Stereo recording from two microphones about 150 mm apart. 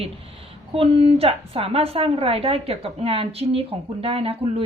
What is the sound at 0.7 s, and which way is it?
A woman's voice, 40° right (ahead or behind).